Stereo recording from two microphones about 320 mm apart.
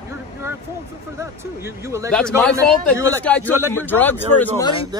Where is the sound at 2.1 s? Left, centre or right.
Centre.